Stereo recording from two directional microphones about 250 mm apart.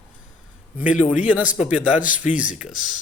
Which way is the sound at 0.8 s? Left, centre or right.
Centre.